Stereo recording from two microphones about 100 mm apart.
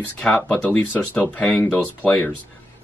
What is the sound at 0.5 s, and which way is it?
Speech, 15° left (ahead or behind).